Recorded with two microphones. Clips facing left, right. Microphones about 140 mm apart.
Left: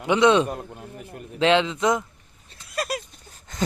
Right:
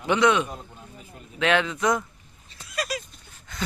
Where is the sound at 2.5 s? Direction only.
55° left (ahead or behind).